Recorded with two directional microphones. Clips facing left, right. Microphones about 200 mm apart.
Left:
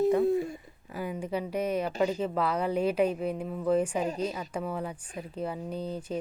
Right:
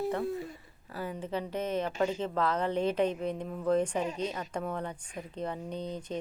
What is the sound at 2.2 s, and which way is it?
A woman's voice, 10° left (ahead or behind).